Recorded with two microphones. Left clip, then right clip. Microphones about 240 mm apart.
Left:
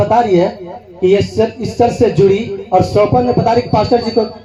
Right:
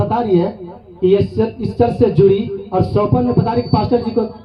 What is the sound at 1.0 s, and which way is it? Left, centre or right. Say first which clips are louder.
Speech: left 3 dB; right.